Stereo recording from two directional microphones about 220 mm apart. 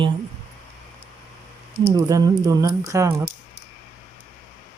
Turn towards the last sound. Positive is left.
turn(degrees=-15)  # may be behind; listen again after turning